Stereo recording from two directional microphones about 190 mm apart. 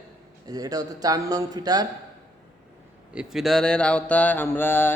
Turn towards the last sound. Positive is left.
turn(degrees=10)  # may be behind; listen again after turning